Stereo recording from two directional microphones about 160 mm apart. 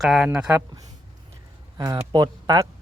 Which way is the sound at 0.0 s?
Centre (ahead or behind).